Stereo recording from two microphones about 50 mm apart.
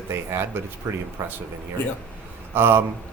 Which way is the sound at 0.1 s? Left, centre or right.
Right.